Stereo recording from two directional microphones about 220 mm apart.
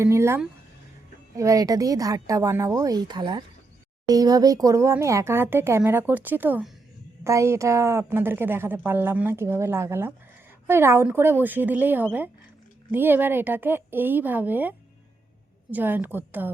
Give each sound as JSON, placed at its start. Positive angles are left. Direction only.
{"t": 0.0, "sound": "a woman's voice", "side_deg": -10}